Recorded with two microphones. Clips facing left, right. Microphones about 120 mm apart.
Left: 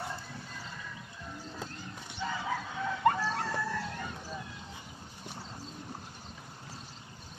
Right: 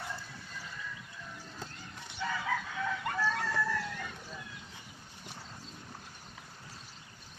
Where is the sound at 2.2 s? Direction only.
25° left (ahead or behind).